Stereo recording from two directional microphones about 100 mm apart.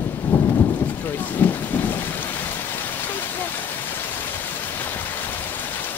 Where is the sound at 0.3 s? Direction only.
15° left (ahead or behind).